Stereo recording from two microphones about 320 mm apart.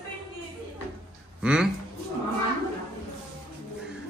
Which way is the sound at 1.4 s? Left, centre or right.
Centre.